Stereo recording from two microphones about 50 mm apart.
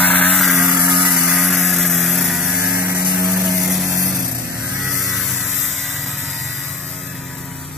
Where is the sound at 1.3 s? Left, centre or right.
Centre.